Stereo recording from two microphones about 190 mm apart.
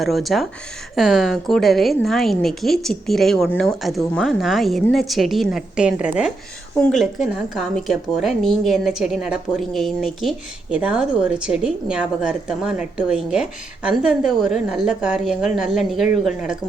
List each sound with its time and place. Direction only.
0.0 s speech: centre (ahead or behind)